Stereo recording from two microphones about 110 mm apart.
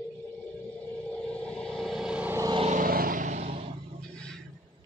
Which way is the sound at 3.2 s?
90° right.